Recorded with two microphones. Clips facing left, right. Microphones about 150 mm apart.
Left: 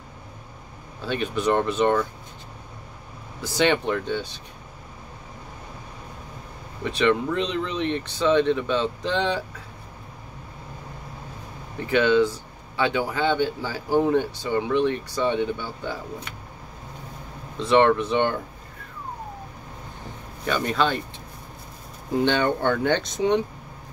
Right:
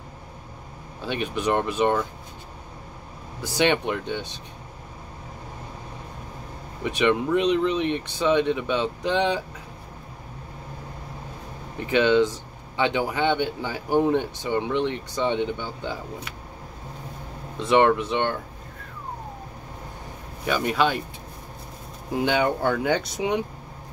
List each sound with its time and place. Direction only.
1.0 s speech: 15° right (ahead or behind)
3.3 s speech: 15° right (ahead or behind)
6.8 s speech: 15° right (ahead or behind)
11.9 s speech: 20° right (ahead or behind)
17.6 s speech: 5° right (ahead or behind)
20.4 s speech: 10° right (ahead or behind)
22.2 s speech: 10° right (ahead or behind)